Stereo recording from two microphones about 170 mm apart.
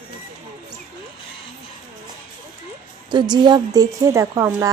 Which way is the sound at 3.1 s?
25° right (ahead or behind).